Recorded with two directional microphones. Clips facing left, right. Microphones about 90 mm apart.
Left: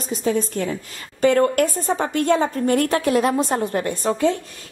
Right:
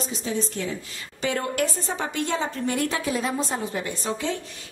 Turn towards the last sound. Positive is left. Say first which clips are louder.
# left 8 dB
turn(degrees=50)  # may be behind; listen again after turning